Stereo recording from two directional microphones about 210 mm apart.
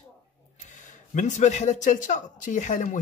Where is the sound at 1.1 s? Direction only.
35° left (ahead or behind).